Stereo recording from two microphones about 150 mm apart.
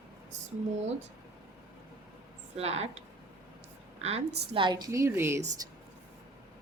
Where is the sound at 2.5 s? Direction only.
45° right (ahead or behind).